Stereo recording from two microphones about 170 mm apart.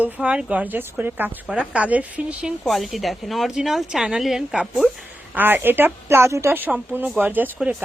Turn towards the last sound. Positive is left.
turn(degrees=-10)  # may be behind; listen again after turning